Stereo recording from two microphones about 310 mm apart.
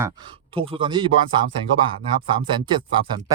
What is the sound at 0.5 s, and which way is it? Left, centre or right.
Speech, centre.